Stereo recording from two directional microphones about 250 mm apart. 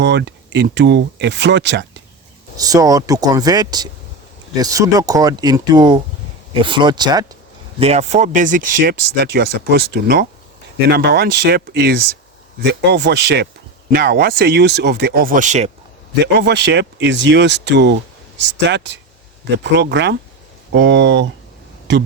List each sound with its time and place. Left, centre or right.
0.0 s speech: right
2.6 s speech: centre
16.2 s speech: right